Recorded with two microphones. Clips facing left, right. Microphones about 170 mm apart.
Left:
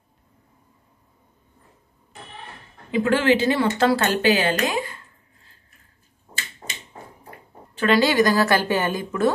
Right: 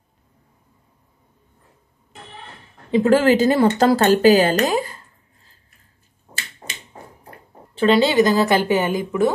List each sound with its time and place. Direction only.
2.9 s speech: 40° right (ahead or behind)
7.8 s a woman's voice: 25° right (ahead or behind)